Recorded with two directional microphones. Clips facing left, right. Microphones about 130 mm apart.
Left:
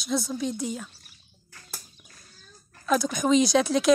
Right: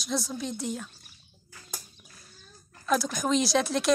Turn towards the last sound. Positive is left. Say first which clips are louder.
# left 4 dB
turn(degrees=0)  # may be behind; listen again after turning